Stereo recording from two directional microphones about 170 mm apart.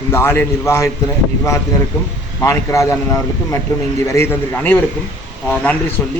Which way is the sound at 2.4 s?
15° left (ahead or behind).